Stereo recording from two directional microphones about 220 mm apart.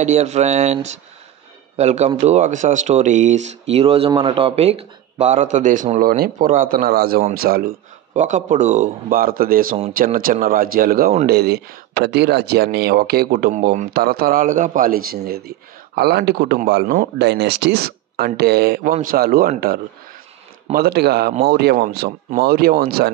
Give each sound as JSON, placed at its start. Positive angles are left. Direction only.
{"t": 0.0, "sound": "a man's voice", "side_deg": -30}
{"t": 8.1, "sound": "a man's voice", "side_deg": -35}
{"t": 13.5, "sound": "a man's voice", "side_deg": -35}
{"t": 16.8, "sound": "speech", "side_deg": -40}